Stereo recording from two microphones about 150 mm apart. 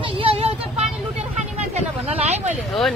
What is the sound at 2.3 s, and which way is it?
Speech, 45° right (ahead or behind).